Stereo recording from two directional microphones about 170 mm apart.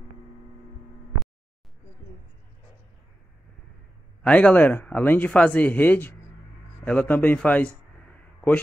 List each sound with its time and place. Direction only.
4.2 s speech: 5° left (ahead or behind)